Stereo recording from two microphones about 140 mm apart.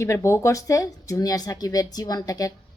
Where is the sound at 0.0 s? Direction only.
20° left (ahead or behind).